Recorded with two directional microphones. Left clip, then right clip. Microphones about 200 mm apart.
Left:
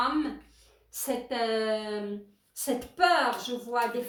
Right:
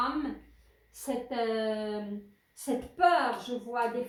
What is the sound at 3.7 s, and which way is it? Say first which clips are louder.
Speech: left 3 dB; 35° left (ahead or behind).